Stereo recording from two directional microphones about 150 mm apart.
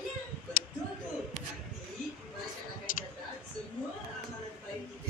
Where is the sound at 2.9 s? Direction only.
60° left (ahead or behind).